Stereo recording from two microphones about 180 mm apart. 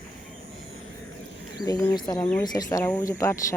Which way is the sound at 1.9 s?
20° left (ahead or behind).